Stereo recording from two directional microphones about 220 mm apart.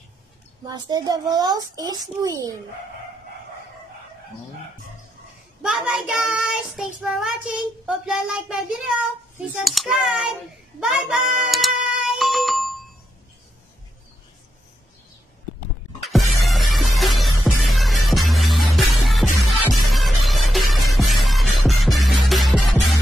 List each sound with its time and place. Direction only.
0.7 s a child's voice: 20° right (ahead or behind)
5.6 s child singing: centre (ahead or behind)
10.8 s music: centre (ahead or behind)
16.0 s music: centre (ahead or behind)